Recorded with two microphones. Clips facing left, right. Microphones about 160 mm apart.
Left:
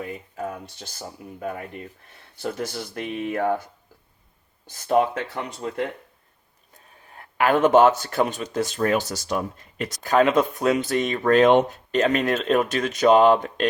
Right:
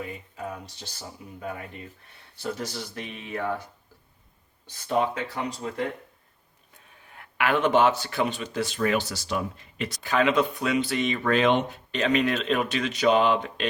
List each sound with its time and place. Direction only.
0.0 s speech: 50° left (ahead or behind)
4.7 s speech: 50° left (ahead or behind)
6.7 s speech: 40° left (ahead or behind)